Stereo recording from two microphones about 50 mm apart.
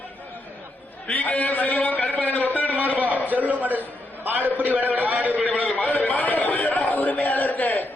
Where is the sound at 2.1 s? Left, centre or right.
Left.